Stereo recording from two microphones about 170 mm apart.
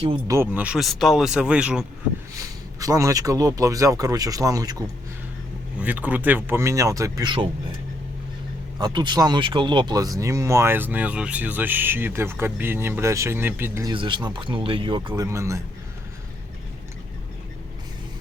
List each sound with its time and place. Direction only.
0.3 s speech: 10° right (ahead or behind)
2.3 s speech: 20° right (ahead or behind)
5.8 s speech: 10° right (ahead or behind)
8.8 s speech: 25° right (ahead or behind)
13.9 s speech: 30° right (ahead or behind)